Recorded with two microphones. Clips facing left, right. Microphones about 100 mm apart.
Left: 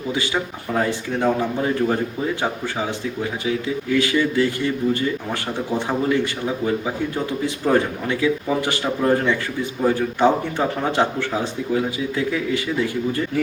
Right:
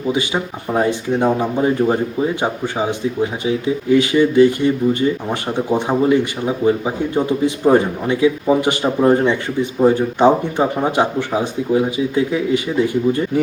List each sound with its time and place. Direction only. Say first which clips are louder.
0.1 s speech: right 4 dB; 20° right (ahead or behind)